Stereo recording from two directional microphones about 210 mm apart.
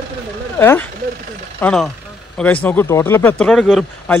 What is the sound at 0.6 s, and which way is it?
A man's voice, 10° left (ahead or behind).